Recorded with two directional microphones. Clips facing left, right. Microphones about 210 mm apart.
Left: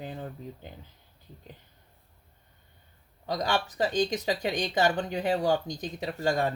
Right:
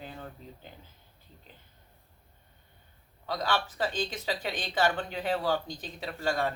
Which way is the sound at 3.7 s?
40° left (ahead or behind).